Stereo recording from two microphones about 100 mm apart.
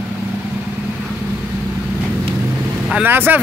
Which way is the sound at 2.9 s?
15° right (ahead or behind).